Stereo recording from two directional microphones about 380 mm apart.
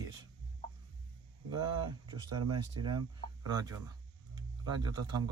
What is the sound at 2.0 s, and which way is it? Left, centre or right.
Speech, centre.